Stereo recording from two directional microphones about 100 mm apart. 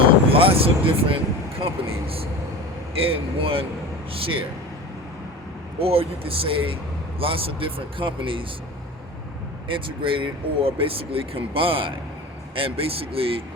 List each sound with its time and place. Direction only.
0.3 s speech: 70° right (ahead or behind)
5.8 s speech: 70° right (ahead or behind)
9.6 s speech: 60° right (ahead or behind)